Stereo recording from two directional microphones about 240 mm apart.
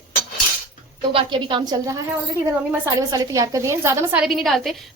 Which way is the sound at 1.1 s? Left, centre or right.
Right.